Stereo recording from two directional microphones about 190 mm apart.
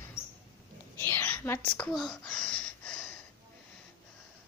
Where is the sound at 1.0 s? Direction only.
10° left (ahead or behind).